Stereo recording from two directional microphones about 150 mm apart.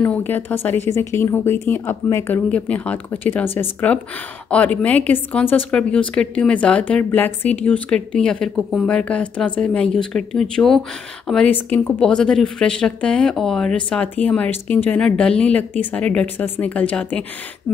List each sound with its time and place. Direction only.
0.0 s a woman's voice: 10° left (ahead or behind)